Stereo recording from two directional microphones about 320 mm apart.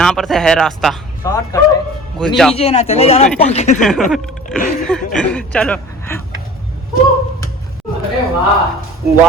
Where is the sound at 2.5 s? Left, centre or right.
Centre.